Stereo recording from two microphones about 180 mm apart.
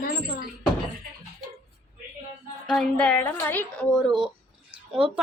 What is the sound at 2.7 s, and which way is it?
Speech, 5° left (ahead or behind).